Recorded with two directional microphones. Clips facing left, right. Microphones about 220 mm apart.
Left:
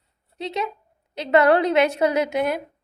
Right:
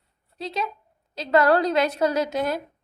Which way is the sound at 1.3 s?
20° left (ahead or behind).